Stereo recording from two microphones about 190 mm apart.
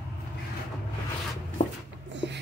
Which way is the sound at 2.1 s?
70° right (ahead or behind).